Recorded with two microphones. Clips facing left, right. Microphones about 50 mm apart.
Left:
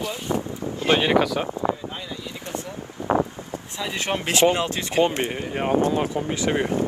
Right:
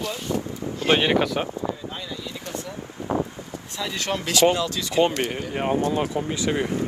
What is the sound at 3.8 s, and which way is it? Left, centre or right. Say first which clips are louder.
Speech: left 1 dB; left.